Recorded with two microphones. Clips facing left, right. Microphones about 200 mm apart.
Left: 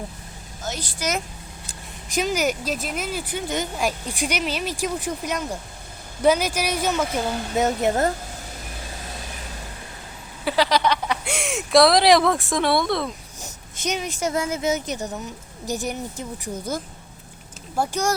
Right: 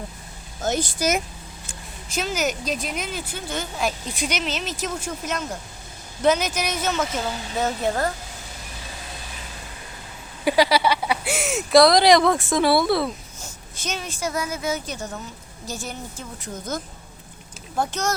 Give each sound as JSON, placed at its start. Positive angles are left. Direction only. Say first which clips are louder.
{"t": 0.6, "sound": "a woman's voice", "louder": "right 7 dB", "side_deg": -50}
{"t": 2.0, "sound": "a woman's voice", "louder": "left 3 dB", "side_deg": 15}
{"t": 10.4, "sound": "speech", "louder": "right 2 dB", "side_deg": -10}
{"t": 13.4, "sound": "speech", "louder": "left 6 dB", "side_deg": 15}